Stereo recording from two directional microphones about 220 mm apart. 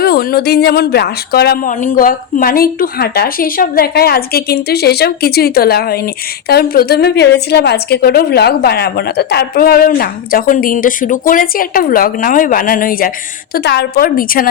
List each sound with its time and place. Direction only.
0.0 s a woman's voice: 45° left (ahead or behind)